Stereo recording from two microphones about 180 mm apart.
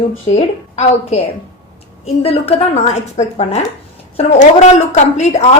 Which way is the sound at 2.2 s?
35° left (ahead or behind).